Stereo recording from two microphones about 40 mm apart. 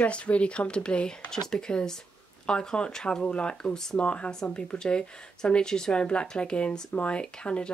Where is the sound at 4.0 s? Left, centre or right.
Left.